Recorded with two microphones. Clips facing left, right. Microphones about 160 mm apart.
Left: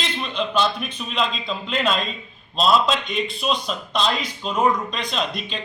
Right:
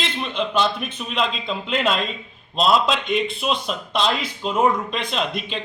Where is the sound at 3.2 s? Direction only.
20° right (ahead or behind).